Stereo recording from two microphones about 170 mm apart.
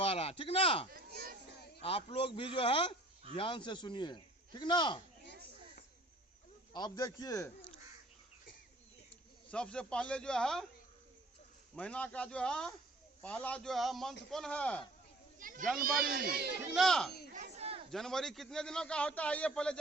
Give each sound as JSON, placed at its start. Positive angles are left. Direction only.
{"t": 0.0, "sound": "a sound", "side_deg": 35}
{"t": 0.9, "sound": "a sound", "side_deg": -60}
{"t": 1.8, "sound": "a man's voice", "side_deg": 35}
{"t": 6.7, "sound": "a man's voice", "side_deg": 25}
{"t": 9.5, "sound": "a man's voice", "side_deg": 5}
{"t": 11.7, "sound": "a man's voice", "side_deg": 5}
{"t": 15.4, "sound": "children playing", "side_deg": -50}
{"t": 15.8, "sound": "speech", "side_deg": -65}
{"t": 16.7, "sound": "a man's voice", "side_deg": 5}
{"t": 17.5, "sound": "chatter", "side_deg": -35}
{"t": 17.9, "sound": "a man's voice", "side_deg": 5}